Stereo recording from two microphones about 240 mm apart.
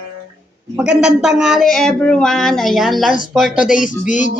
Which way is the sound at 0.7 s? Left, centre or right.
Centre.